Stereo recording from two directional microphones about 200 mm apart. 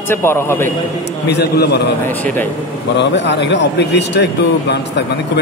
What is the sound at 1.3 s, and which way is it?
Speech, 55° left (ahead or behind).